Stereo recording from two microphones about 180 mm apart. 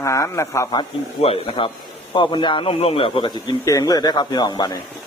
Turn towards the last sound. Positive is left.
turn(degrees=25)  # may be behind; listen again after turning